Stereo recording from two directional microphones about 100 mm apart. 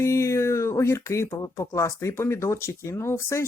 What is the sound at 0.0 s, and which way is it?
Speech, 30° left (ahead or behind).